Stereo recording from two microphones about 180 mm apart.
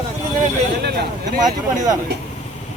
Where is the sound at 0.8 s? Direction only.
65° right (ahead or behind).